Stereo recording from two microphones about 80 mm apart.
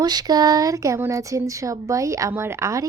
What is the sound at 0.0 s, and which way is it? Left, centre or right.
Speech, right.